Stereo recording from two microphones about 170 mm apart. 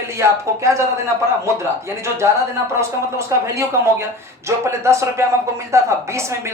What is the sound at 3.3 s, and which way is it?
Speech, 15° right (ahead or behind).